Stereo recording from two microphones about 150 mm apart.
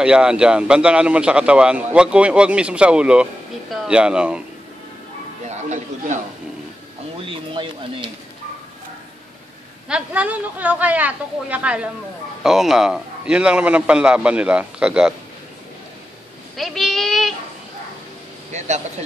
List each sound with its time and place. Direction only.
0.0 s a man's voice: 5° right (ahead or behind)
5.5 s music: 50° right (ahead or behind)
7.2 s a sound: 35° right (ahead or behind)
9.8 s a man's voice: 10° right (ahead or behind)
16.5 s a child's voice: centre (ahead or behind)
18.5 s speech: 50° right (ahead or behind)